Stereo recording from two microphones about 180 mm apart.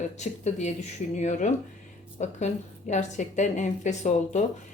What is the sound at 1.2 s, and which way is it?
Speech, 40° left (ahead or behind).